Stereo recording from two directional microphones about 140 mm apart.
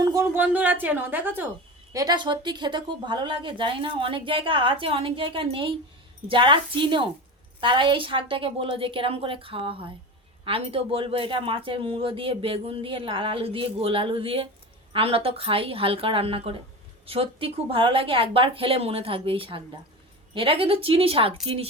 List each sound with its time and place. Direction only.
0.0 s a sound: 25° right (ahead or behind)
0.3 s a woman's voice: 10° right (ahead or behind)
1.9 s speech: 25° right (ahead or behind); by 21.7 s 45° right (ahead or behind)